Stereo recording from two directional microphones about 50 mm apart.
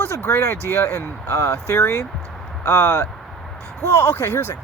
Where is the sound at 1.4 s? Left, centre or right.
Left.